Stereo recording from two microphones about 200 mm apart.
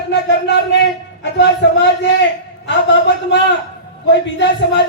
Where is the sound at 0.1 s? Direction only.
60° left (ahead or behind).